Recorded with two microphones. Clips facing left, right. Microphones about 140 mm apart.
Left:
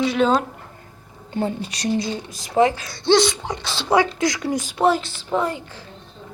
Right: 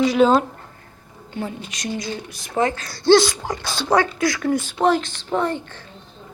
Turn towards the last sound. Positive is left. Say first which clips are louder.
# right 1 dB
turn(degrees=10)  # may be behind; listen again after turning